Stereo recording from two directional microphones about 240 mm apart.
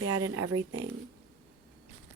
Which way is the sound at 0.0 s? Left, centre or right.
Right.